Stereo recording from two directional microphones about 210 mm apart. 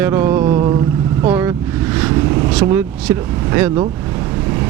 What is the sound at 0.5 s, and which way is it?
Vehicle, 20° right (ahead or behind).